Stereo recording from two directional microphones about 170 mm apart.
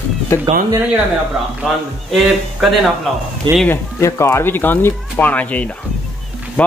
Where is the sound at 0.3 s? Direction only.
15° left (ahead or behind).